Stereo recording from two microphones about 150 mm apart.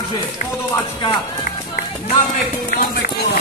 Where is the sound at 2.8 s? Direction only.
80° left.